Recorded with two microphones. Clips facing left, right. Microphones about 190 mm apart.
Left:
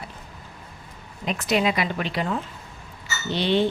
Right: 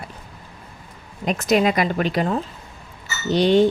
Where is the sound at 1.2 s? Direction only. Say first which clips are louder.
Right 5 dB; 45° right (ahead or behind).